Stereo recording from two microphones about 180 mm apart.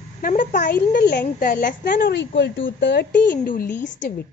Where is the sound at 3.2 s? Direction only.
50° left (ahead or behind).